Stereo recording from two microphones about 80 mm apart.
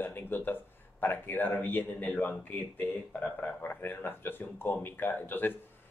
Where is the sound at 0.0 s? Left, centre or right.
Left.